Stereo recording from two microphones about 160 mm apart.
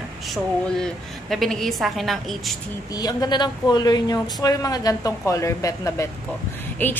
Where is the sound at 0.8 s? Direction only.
Centre (ahead or behind).